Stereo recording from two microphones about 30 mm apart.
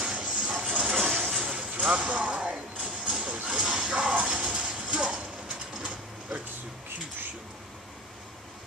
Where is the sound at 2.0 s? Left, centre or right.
Right.